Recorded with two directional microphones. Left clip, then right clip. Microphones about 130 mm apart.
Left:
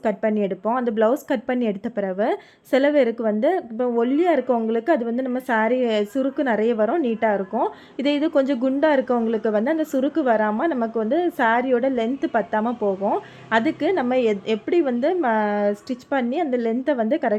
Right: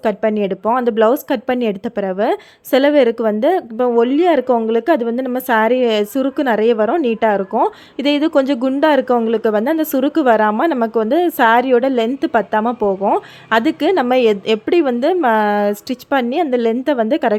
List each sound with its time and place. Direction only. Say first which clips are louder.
0.0 s speech: right 5 dB; 25° right (ahead or behind)